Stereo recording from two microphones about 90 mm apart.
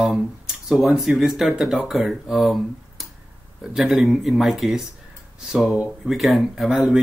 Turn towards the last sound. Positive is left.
turn(degrees=-5)  # may be behind; listen again after turning